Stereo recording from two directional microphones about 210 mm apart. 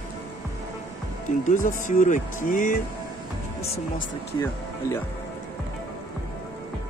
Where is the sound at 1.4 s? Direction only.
40° left (ahead or behind).